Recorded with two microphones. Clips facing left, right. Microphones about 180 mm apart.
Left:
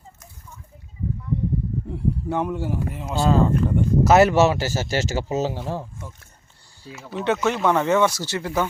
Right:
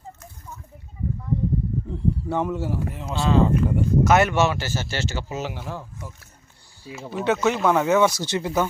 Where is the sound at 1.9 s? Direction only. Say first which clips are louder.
Even; 10° left (ahead or behind).